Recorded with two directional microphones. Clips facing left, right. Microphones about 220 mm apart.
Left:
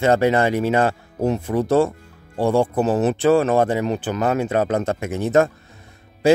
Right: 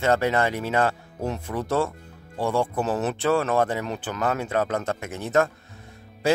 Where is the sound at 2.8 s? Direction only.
15° left (ahead or behind).